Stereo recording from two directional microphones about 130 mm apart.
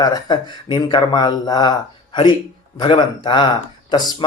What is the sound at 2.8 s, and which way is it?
Speech, 40° left (ahead or behind).